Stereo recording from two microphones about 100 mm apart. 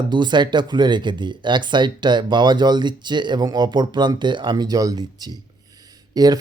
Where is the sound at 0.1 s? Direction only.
50° right (ahead or behind).